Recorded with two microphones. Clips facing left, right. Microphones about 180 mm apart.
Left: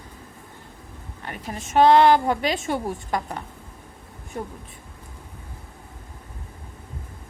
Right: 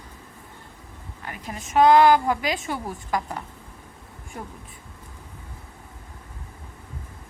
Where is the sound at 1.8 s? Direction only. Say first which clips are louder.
Even; 30° left (ahead or behind).